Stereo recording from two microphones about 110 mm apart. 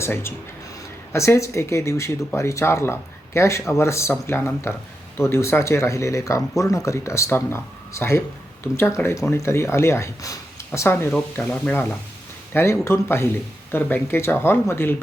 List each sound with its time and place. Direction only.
0.0 s speech: 25° left (ahead or behind)
11.3 s speech: 10° left (ahead or behind)